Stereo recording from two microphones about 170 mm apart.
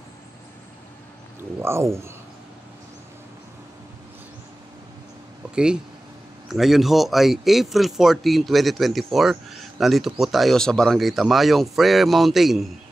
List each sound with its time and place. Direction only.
1.6 s speech: 15° right (ahead or behind)
5.5 s speech: 5° right (ahead or behind)